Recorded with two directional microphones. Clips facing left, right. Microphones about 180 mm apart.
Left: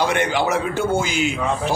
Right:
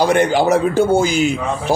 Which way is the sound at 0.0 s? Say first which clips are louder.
Right 6 dB; 40° right (ahead or behind).